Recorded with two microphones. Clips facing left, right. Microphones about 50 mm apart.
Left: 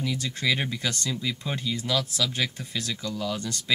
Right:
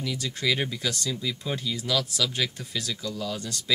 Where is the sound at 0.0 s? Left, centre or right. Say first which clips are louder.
Left 1 dB; centre.